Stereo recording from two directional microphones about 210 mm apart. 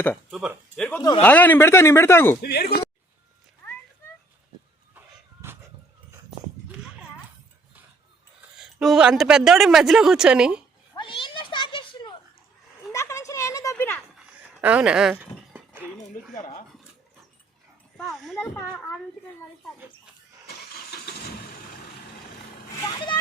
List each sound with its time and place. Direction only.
0.3 s speech: 5° right (ahead or behind)
0.9 s speech: 10° left (ahead or behind)
2.4 s speech: 50° left (ahead or behind)
8.5 s a woman's voice: centre (ahead or behind)
10.9 s cat: 25° left (ahead or behind)
12.9 s a sound: 15° left (ahead or behind)
14.6 s a sound: 5° right (ahead or behind)
16.3 s speech: 35° left (ahead or behind)
17.9 s a sound: centre (ahead or behind)
18.5 s speech: 10° left (ahead or behind)
20.5 s vehicle: 50° left (ahead or behind)
22.9 s speech: 20° left (ahead or behind)